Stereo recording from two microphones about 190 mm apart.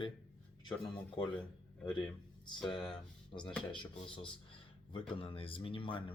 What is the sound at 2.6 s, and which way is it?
Speech, 5° left (ahead or behind).